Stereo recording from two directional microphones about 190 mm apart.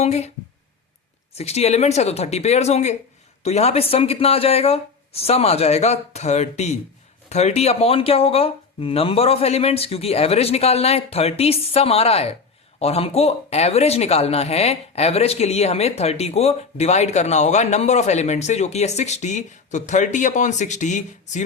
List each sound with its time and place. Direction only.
0.0 s speech: 35° left (ahead or behind)
1.4 s speech: 35° left (ahead or behind)